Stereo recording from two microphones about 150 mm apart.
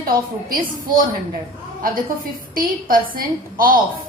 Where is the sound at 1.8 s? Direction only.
75° right (ahead or behind).